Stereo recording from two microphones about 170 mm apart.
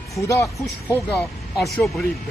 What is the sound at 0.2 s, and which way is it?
Speech, 15° left (ahead or behind).